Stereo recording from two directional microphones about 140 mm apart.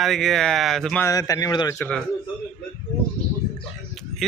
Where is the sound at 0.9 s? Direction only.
20° left (ahead or behind).